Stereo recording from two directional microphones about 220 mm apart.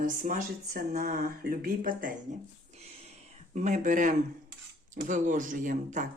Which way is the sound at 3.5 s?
35° right (ahead or behind).